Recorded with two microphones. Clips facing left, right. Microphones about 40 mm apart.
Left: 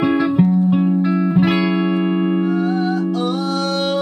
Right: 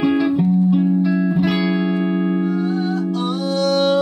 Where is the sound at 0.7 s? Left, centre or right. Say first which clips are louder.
Even; left; by 2.5 s centre.